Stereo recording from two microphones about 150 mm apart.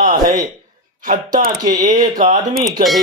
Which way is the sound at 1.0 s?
60° right (ahead or behind).